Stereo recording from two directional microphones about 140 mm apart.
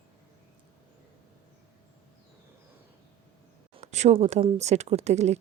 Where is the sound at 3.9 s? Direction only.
50° right (ahead or behind).